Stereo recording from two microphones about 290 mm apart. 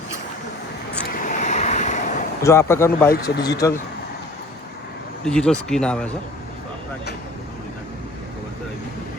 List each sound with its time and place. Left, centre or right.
1.2 s vehicle: left
2.4 s speech: centre
5.2 s speech: centre